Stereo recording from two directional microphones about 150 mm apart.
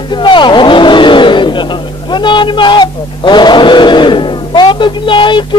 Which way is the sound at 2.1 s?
30° left (ahead or behind).